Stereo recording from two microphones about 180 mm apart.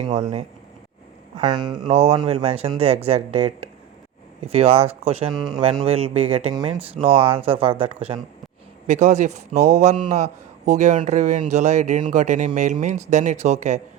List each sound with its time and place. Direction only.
0.0 s speech: 40° right (ahead or behind)
1.4 s speech: 25° right (ahead or behind)
1.9 s speech: 35° right (ahead or behind)
4.5 s speech: 35° right (ahead or behind)
5.3 s speech: centre (ahead or behind)
5.8 s speech: 35° right (ahead or behind)
8.9 s speech: 40° right (ahead or behind)